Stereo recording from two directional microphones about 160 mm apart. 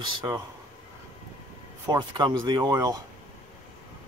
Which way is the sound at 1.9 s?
25° right (ahead or behind).